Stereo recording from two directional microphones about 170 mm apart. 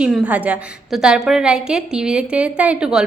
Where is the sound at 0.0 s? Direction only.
5° right (ahead or behind).